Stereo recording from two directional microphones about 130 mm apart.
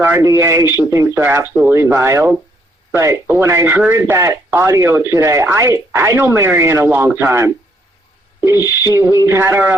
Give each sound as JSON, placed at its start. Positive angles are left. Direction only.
{"t": 0.0, "sound": "speech", "side_deg": -20}
{"t": 8.8, "sound": "speech", "side_deg": -25}